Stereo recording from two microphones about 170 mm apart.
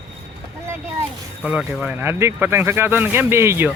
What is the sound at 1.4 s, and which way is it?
Speech, 5° right (ahead or behind).